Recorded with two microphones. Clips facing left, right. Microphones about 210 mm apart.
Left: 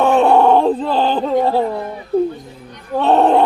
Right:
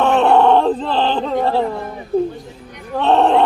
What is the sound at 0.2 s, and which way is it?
Groan, centre (ahead or behind).